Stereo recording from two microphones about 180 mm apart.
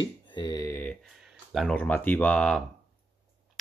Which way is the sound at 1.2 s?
Centre (ahead or behind).